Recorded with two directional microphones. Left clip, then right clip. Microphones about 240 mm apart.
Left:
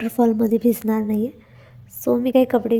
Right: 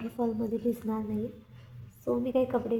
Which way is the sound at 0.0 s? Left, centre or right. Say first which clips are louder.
Left 13 dB; left.